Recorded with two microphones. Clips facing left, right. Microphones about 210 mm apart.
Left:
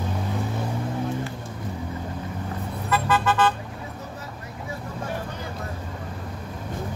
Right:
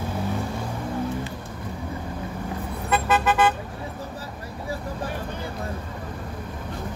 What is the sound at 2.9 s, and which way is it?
Vehicle, 20° right (ahead or behind).